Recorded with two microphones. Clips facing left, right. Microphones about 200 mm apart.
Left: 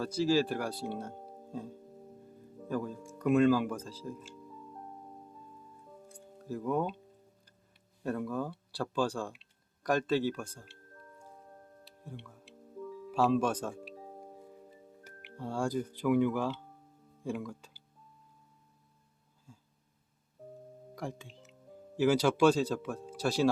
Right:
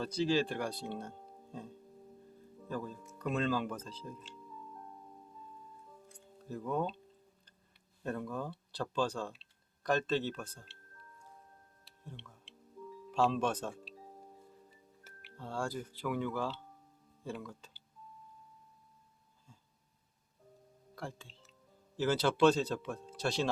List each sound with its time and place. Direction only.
0.0 s a man's voice: 10° left (ahead or behind)
6.5 s a man's voice: 10° left (ahead or behind)
8.0 s a man's voice: 10° left (ahead or behind)
12.0 s music: 10° left (ahead or behind)
13.1 s speech: 5° left (ahead or behind)
13.9 s music: 60° left (ahead or behind)
15.4 s a man's voice: 15° left (ahead or behind)
20.9 s a man's voice: 15° left (ahead or behind)